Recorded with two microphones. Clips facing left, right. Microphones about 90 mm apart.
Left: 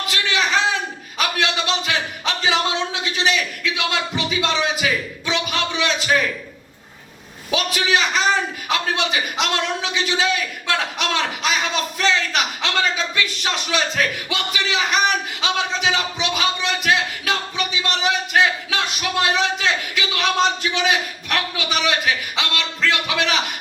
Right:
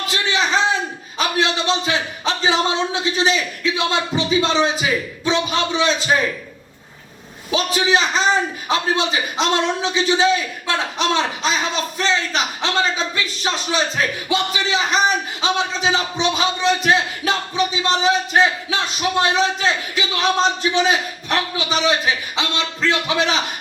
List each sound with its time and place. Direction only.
0.1 s a sound: 30° right (ahead or behind)
1.2 s a man's voice: 30° right (ahead or behind)
7.5 s speech: 30° right (ahead or behind)